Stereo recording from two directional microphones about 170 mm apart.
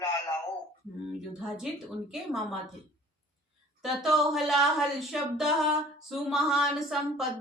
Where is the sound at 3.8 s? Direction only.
Centre (ahead or behind).